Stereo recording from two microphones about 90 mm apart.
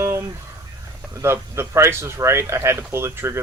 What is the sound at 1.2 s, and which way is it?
Speech, 30° right (ahead or behind).